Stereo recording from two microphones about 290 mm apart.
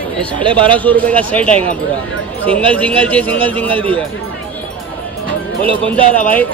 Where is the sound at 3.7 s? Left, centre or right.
Centre.